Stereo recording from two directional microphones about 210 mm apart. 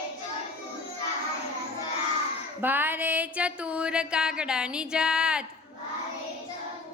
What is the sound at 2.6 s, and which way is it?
Speech, 10° right (ahead or behind).